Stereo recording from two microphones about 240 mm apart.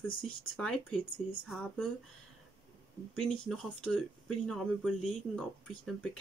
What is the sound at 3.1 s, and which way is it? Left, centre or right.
Speech, centre.